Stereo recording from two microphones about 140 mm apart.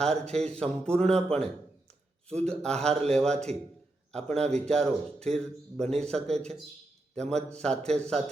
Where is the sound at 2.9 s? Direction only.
45° right (ahead or behind).